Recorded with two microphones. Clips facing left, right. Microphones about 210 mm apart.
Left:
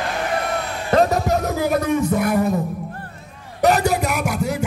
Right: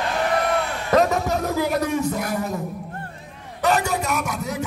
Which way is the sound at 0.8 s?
35° left (ahead or behind).